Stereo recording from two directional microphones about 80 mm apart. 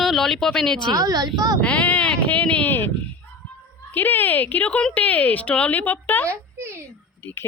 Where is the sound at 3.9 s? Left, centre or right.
Left.